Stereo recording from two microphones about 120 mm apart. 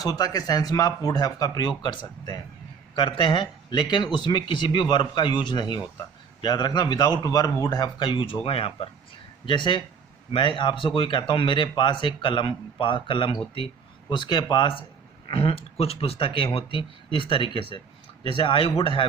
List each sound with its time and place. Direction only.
0.0 s speech: 30° left (ahead or behind)